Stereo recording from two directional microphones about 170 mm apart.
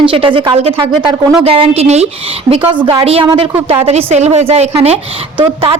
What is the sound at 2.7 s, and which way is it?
Speech, 30° right (ahead or behind).